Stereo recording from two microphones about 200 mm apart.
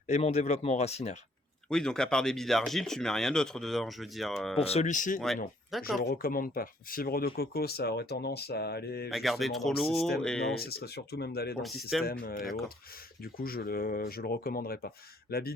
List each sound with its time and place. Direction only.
0.1 s speech: 35° left (ahead or behind)
1.7 s speech: 5° left (ahead or behind)
4.6 s speech: 30° left (ahead or behind); by 9.0 s 55° left (ahead or behind)
9.0 s speech: centre (ahead or behind)
10.5 s speech: 50° left (ahead or behind)
11.6 s speech: centre (ahead or behind)
12.2 s speech: 45° left (ahead or behind)